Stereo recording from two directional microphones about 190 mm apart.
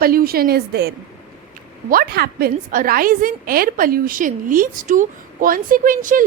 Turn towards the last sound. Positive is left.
turn(degrees=-45)  # may be behind; listen again after turning